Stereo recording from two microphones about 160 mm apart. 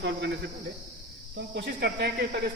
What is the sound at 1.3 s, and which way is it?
Speech, 90° right.